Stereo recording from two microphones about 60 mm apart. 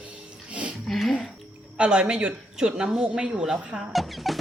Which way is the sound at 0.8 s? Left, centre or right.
Centre.